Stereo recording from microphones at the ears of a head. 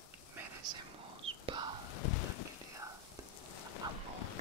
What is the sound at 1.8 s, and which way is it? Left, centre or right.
Rain, left.